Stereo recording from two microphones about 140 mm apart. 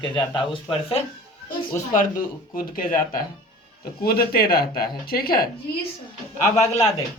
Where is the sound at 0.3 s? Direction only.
40° left (ahead or behind).